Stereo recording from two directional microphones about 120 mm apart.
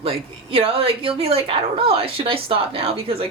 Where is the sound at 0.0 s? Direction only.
55° right (ahead or behind).